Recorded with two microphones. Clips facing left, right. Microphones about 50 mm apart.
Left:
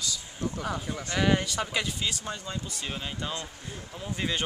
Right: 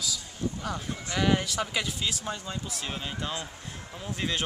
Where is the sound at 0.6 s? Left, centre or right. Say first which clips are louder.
Left 1 dB; centre.